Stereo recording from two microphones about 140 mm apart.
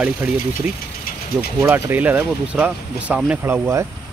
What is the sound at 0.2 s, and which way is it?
Speech, 15° right (ahead or behind).